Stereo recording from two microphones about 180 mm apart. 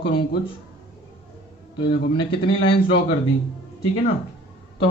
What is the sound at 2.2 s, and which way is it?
Speech, 25° left (ahead or behind).